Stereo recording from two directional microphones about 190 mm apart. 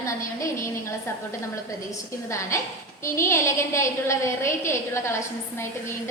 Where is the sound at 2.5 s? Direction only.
15° left (ahead or behind).